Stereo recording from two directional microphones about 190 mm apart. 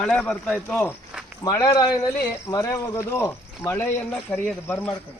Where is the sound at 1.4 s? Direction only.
15° left (ahead or behind).